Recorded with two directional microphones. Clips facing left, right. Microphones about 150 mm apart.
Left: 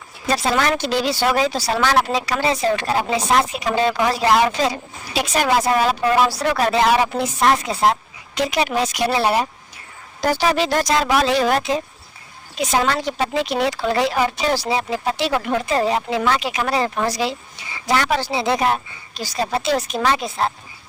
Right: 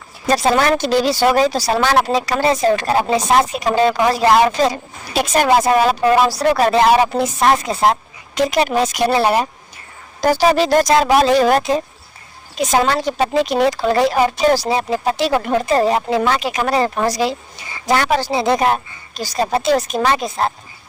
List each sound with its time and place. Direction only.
0.3 s speech: 40° right (ahead or behind)